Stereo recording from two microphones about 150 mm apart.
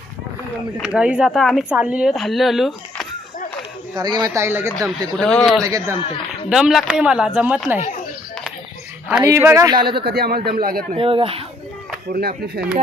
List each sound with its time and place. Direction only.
0.8 s speech: 5° right (ahead or behind)
3.9 s speech: 25° right (ahead or behind)
4.4 s speech: 15° right (ahead or behind)
4.9 s speech: 5° left (ahead or behind)
5.6 s speech: 20° right (ahead or behind)
6.5 s speech: centre (ahead or behind)
9.2 s speech: 15° right (ahead or behind)
10.0 s speech: 90° right
10.6 s a man's voice: 75° right (ahead or behind)
10.9 s speech: 35° right (ahead or behind)
12.1 s speech: 90° right; by 12.8 s 70° right (ahead or behind)